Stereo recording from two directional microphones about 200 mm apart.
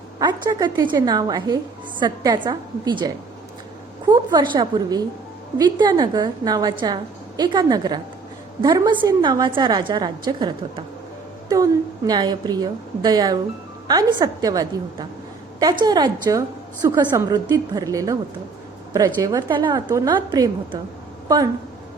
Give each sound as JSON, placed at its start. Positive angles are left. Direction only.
{"t": 0.2, "sound": "a woman's voice", "side_deg": -20}
{"t": 4.1, "sound": "a woman's voice", "side_deg": -20}